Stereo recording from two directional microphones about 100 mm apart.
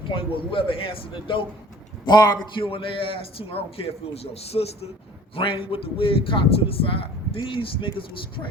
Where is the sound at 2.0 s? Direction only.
40° left (ahead or behind).